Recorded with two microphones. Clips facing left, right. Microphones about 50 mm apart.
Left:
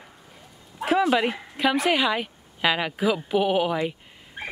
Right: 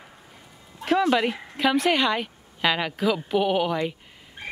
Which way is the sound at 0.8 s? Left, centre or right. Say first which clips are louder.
Even; centre.